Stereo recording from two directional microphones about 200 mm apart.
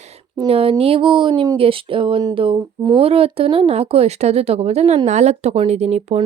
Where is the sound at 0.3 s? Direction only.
30° right (ahead or behind).